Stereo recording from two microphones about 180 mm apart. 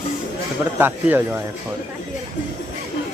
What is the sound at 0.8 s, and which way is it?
Speech, 10° right (ahead or behind).